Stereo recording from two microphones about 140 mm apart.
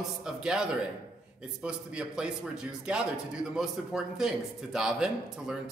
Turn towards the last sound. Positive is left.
turn(degrees=-5)  # may be behind; listen again after turning